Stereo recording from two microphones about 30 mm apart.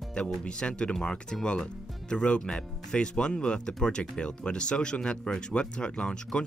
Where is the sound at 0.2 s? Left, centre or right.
Left.